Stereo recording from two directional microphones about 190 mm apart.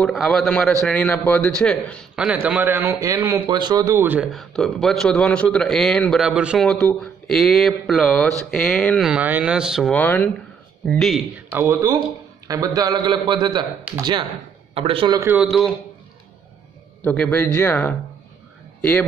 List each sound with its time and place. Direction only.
0.0 s a man's voice: centre (ahead or behind)
11.5 s a man's voice: 15° right (ahead or behind)
15.1 s speech: 10° right (ahead or behind)
17.0 s speech: 5° left (ahead or behind)